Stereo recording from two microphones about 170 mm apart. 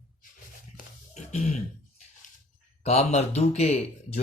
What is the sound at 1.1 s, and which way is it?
Throat clearing, 40° left (ahead or behind).